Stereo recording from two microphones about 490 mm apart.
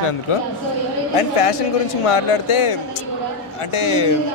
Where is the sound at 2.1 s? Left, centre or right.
Left.